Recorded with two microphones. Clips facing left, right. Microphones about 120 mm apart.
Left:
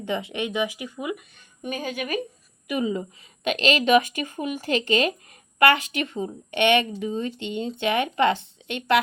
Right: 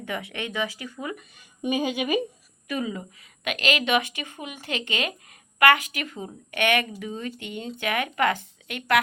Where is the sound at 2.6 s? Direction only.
20° left (ahead or behind).